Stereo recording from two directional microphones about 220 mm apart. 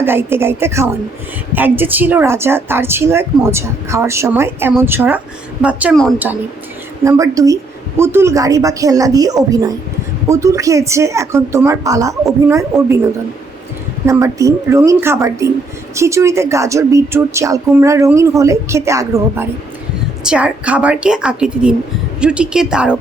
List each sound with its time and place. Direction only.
0.0 s a woman's voice: 10° right (ahead or behind)
7.0 s a woman's voice: 15° right (ahead or behind)
14.1 s a woman's voice: 15° right (ahead or behind)